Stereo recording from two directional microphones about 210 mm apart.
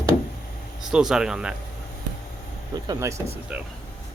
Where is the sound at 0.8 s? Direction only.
Centre (ahead or behind).